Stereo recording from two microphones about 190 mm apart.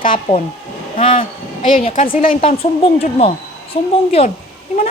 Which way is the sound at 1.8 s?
40° left (ahead or behind).